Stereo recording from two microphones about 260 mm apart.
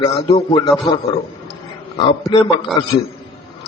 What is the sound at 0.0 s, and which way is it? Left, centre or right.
Speech, centre.